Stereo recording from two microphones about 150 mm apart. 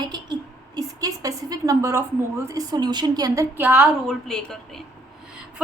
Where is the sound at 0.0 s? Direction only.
30° right (ahead or behind).